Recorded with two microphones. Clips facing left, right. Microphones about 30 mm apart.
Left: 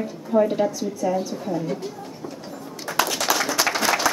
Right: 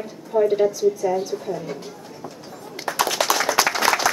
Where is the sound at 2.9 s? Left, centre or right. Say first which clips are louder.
Even; right.